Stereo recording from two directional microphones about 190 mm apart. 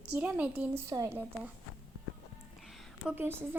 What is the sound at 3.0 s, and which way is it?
Speech, 10° right (ahead or behind).